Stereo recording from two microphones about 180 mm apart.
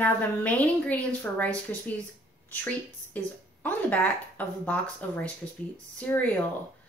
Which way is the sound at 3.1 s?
10° left (ahead or behind).